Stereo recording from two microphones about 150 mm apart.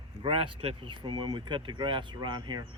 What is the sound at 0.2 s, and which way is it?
Speech, 40° right (ahead or behind).